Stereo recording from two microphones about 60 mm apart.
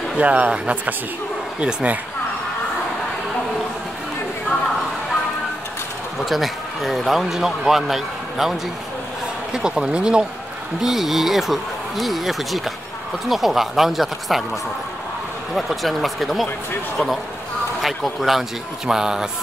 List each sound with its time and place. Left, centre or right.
0.2 s speech: right
6.1 s speech: centre
10.8 s speech: centre
15.5 s speech: centre
17.8 s speech: centre